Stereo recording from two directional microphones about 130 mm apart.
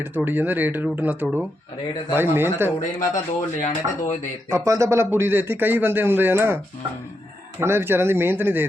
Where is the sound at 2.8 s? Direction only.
75° left (ahead or behind).